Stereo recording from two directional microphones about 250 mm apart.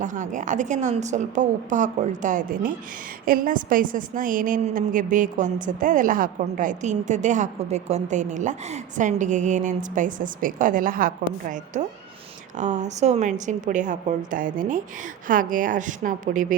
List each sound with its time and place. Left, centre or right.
0.0 s a woman's voice: right